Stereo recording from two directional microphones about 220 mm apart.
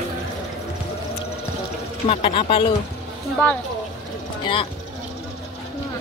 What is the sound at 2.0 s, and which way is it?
Speech, 25° left (ahead or behind).